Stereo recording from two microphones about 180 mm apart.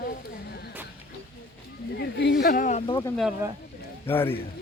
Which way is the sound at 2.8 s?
30° left (ahead or behind).